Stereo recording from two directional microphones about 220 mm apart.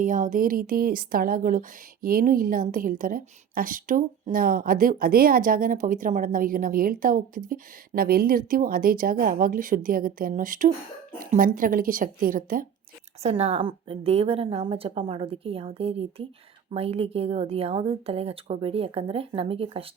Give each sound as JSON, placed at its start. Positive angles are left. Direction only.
{"t": 0.0, "sound": "speech", "side_deg": -35}
{"t": 13.2, "sound": "a woman's voice", "side_deg": -30}